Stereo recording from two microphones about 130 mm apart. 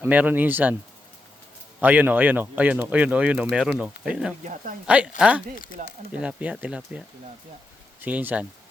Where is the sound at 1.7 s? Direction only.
15° right (ahead or behind).